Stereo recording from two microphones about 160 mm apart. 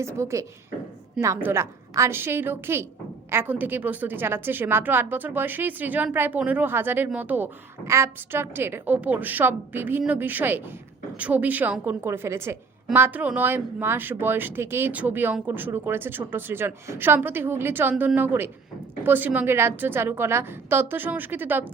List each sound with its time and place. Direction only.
0.0 s a woman's voice: 15° right (ahead or behind)